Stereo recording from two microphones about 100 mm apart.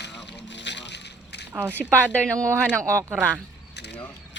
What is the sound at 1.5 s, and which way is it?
Speech, 20° right (ahead or behind).